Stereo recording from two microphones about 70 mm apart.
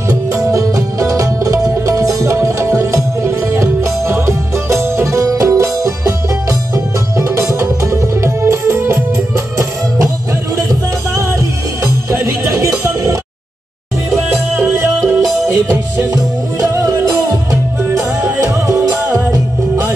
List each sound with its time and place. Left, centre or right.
0.1 s music: right
5.8 s music: right
6.7 s music: right
11.1 s music: right
14.3 s music: right
15.3 s music: right